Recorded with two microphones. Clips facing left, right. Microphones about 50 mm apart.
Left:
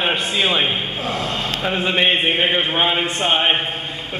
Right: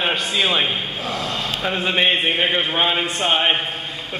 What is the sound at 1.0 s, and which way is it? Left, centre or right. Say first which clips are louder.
Speech: left 2 dB; left.